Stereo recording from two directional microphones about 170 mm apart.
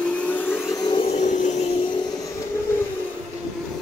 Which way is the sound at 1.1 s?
45° left (ahead or behind).